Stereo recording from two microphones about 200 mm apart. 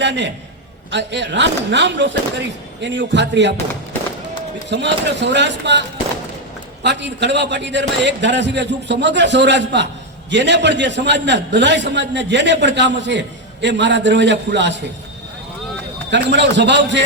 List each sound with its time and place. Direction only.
0.0 s a man's voice: 60° right (ahead or behind)
4.7 s a man's voice: 60° right (ahead or behind)
6.8 s a man's voice: 60° right (ahead or behind)
16.0 s a man's voice: 60° right (ahead or behind)